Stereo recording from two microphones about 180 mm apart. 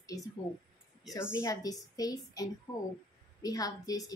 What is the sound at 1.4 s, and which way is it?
A woman's voice, 20° left (ahead or behind).